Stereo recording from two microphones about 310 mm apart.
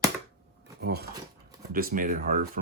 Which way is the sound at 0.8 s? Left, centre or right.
Right.